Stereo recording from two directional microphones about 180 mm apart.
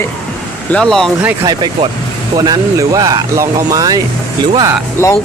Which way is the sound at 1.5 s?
25° right (ahead or behind).